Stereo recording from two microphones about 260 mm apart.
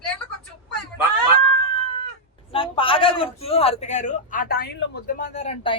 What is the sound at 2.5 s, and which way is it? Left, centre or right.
A man's voice, centre.